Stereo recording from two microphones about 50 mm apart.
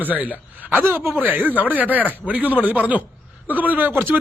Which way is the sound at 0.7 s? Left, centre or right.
Right.